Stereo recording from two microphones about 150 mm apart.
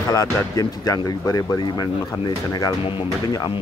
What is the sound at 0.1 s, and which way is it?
Speech, 25° left (ahead or behind).